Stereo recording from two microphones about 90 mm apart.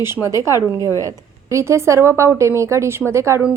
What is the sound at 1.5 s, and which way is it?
A woman's voice, 30° right (ahead or behind).